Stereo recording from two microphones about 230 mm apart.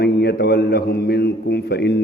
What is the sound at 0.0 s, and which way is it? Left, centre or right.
A man's voice, left.